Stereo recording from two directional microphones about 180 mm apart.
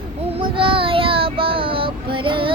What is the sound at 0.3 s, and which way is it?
Child singing, 30° right (ahead or behind).